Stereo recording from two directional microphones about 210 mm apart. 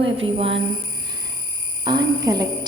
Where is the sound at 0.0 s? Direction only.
25° right (ahead or behind).